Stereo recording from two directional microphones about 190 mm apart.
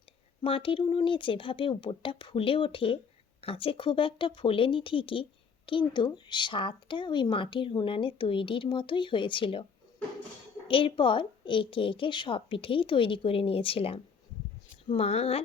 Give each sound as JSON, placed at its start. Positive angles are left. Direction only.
{"t": 0.4, "sound": "speech", "side_deg": 25}
{"t": 10.7, "sound": "speech", "side_deg": 30}